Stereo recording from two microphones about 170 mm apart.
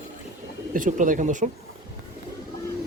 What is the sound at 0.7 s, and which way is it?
Speech, 50° right (ahead or behind).